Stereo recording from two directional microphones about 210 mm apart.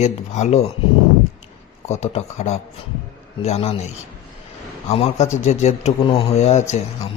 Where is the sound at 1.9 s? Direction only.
30° left (ahead or behind).